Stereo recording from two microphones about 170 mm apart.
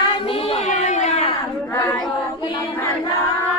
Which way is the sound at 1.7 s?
15° left (ahead or behind).